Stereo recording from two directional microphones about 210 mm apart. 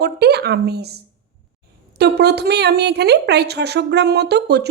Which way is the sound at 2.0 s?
50° right (ahead or behind).